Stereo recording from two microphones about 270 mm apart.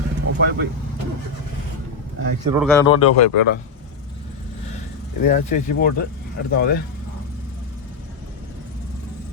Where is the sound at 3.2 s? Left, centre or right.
Left.